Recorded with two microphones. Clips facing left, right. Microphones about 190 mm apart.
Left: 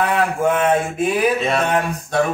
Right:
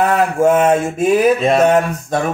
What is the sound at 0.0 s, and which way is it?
Mantra, 45° right (ahead or behind).